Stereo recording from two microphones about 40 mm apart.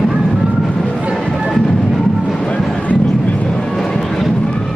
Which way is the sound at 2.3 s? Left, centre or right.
Left.